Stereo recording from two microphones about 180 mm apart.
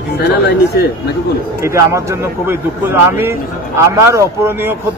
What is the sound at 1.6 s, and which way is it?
A man's voice, 15° right (ahead or behind).